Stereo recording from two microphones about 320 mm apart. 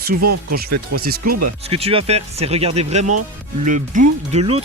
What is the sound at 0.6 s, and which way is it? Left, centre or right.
Speech, right.